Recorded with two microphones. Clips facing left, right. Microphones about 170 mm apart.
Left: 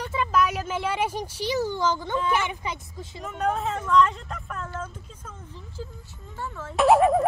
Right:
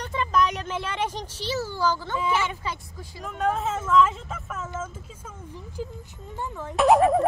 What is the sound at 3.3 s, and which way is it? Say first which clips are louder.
Speech: right 1 dB; centre (ahead or behind).